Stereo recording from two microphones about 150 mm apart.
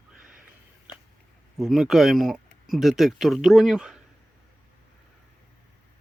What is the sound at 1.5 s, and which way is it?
Speech, centre (ahead or behind).